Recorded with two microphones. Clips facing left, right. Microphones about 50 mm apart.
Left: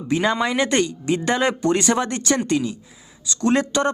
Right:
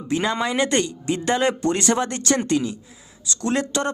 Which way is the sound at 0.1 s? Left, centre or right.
Centre.